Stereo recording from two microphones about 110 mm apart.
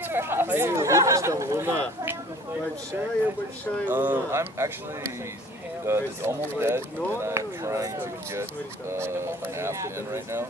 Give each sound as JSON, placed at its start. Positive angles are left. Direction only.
{"t": 0.1, "sound": "speech", "side_deg": -20}
{"t": 3.9, "sound": "speech", "side_deg": -20}
{"t": 5.9, "sound": "speech", "side_deg": -25}